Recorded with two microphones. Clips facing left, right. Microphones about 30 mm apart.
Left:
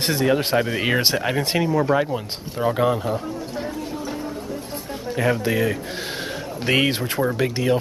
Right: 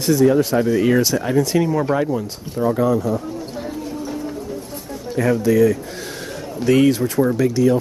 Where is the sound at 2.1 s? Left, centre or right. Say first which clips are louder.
Right 3 dB; left.